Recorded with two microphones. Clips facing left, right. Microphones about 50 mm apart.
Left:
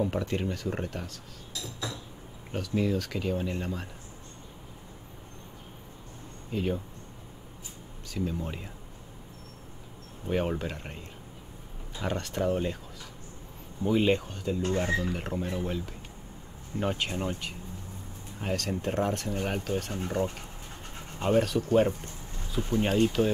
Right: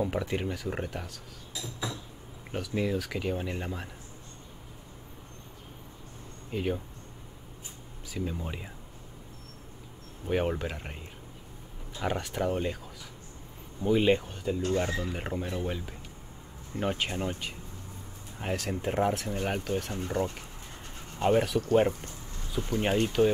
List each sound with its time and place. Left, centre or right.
0.0 s speech: centre
1.5 s a sound: centre
2.5 s speech: centre
6.5 s speech: centre
8.1 s speech: centre
10.2 s speech: centre
13.8 s speech: centre
20.2 s speech: left
21.2 s speech: centre
22.7 s speech: centre